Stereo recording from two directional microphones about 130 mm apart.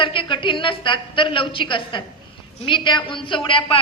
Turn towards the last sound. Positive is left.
turn(degrees=40)  # may be behind; listen again after turning